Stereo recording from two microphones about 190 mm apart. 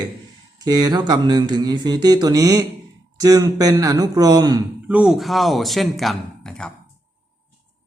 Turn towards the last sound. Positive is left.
turn(degrees=5)  # may be behind; listen again after turning